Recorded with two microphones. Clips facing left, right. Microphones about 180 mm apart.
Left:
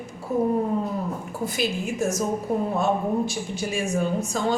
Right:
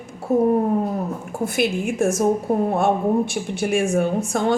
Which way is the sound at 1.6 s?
55° right (ahead or behind).